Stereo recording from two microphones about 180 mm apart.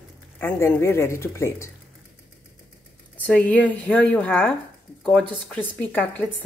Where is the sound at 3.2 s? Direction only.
10° left (ahead or behind).